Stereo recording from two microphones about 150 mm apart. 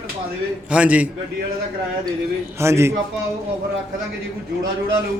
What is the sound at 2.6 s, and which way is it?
Speech, 20° right (ahead or behind).